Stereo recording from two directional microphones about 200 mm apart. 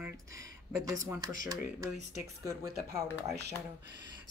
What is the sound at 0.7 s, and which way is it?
A woman's voice, 15° right (ahead or behind).